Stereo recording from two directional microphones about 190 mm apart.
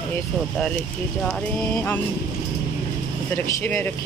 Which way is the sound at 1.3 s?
5° left (ahead or behind).